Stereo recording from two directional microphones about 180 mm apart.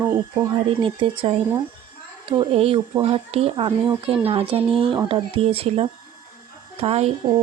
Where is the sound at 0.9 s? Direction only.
30° right (ahead or behind).